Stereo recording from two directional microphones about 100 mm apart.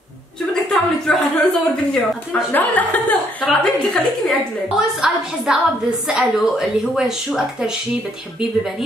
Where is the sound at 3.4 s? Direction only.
Centre (ahead or behind).